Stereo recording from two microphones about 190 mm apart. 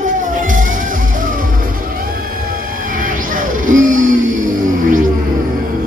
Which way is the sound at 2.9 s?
45° right (ahead or behind).